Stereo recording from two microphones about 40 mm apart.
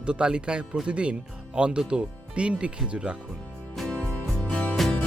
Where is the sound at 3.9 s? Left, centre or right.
Left.